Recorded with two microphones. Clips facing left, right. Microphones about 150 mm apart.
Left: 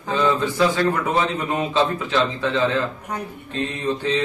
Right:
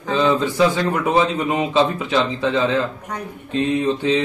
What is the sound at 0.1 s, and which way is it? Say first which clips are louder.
Speech: right 2 dB; 15° right (ahead or behind).